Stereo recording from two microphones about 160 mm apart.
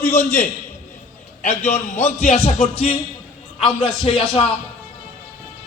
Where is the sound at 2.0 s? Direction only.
45° left (ahead or behind).